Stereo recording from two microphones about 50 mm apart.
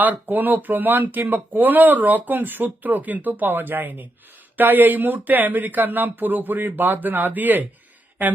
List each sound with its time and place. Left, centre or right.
0.0 s speech: right